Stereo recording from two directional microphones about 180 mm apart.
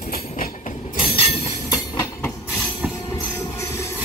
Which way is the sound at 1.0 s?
30° left (ahead or behind).